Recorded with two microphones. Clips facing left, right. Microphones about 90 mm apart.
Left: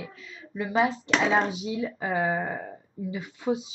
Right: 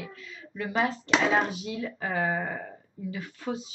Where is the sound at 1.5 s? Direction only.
15° left (ahead or behind).